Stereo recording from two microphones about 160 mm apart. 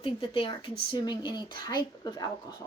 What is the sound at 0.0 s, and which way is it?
Speech, 30° left (ahead or behind).